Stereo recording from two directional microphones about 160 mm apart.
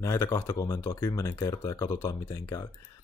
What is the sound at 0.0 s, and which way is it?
Speech, 15° left (ahead or behind).